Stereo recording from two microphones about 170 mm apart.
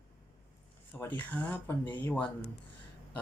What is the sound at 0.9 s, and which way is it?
Speech, 10° left (ahead or behind).